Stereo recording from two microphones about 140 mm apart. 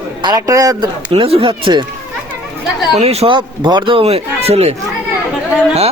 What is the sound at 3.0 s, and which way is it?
Speech, 50° right (ahead or behind).